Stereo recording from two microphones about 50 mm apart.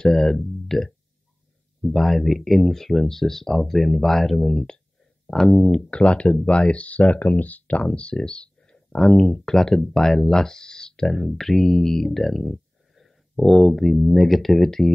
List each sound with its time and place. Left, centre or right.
0.0 s speech: centre
5.9 s speech: left